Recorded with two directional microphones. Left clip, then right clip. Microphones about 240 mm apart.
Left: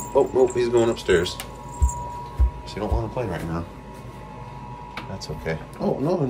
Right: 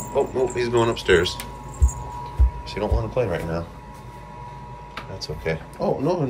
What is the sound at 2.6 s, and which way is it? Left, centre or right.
Music, centre.